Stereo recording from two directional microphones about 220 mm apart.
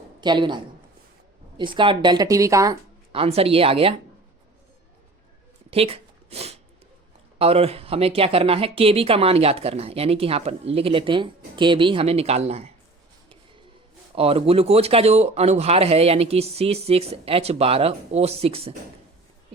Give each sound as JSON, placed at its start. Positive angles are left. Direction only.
{"t": 0.2, "sound": "speech", "side_deg": -20}
{"t": 5.7, "sound": "a sound", "side_deg": -25}
{"t": 7.3, "sound": "speech", "side_deg": -25}
{"t": 14.2, "sound": "speech", "side_deg": -25}